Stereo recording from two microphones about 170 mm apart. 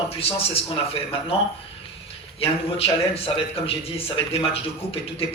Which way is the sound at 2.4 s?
35° left (ahead or behind).